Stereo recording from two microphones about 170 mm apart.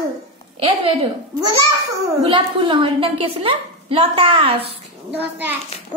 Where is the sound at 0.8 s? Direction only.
35° right (ahead or behind).